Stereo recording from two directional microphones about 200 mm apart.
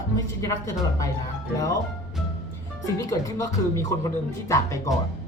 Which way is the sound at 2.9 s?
15° left (ahead or behind).